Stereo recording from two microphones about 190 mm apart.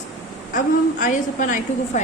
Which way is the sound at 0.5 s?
45° left (ahead or behind).